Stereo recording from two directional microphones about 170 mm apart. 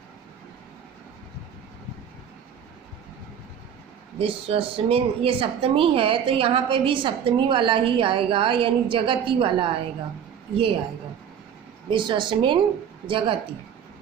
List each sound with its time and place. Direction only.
4.2 s speech: 35° right (ahead or behind)
11.9 s a woman's voice: 30° right (ahead or behind)